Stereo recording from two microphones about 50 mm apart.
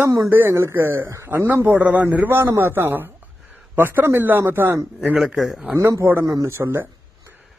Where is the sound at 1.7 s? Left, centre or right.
Right.